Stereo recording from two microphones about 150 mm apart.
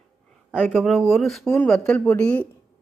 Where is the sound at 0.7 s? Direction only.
Centre (ahead or behind).